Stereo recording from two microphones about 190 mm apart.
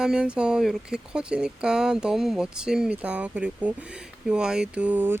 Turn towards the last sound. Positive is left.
turn(degrees=-10)  # may be behind; listen again after turning